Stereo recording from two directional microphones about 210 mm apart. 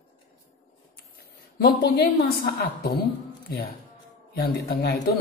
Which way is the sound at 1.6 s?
50° left (ahead or behind).